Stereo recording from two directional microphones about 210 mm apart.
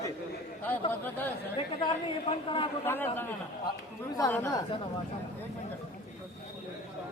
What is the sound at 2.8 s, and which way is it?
A man's voice, 10° left (ahead or behind).